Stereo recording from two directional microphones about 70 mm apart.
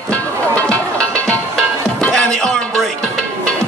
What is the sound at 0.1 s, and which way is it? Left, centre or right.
Music, centre.